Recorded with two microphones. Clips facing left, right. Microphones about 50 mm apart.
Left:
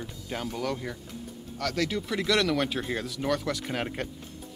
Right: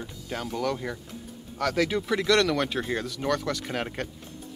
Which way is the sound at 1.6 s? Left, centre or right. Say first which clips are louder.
Right 4 dB; centre.